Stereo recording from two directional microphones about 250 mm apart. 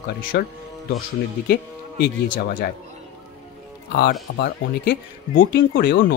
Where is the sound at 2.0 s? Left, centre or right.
Left.